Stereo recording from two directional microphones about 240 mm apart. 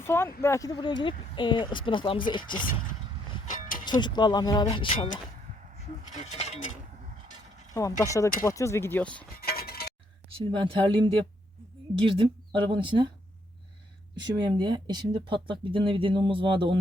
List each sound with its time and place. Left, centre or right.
0.0 s speech: centre
3.8 s speech: centre
6.2 s speech: left
7.7 s speech: centre
9.4 s a sound: left
10.3 s speech: right
12.5 s speech: right
14.2 s speech: centre